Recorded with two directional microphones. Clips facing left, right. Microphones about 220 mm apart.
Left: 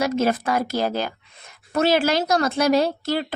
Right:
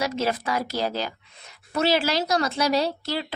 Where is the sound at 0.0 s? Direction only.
50° left (ahead or behind).